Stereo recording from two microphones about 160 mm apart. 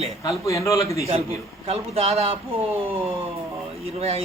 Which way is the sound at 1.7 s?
40° right (ahead or behind).